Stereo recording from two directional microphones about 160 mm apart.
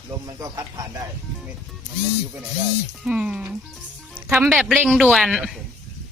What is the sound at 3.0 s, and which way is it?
Speech, 5° right (ahead or behind).